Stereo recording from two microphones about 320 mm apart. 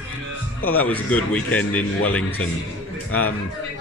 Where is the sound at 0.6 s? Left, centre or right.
Left.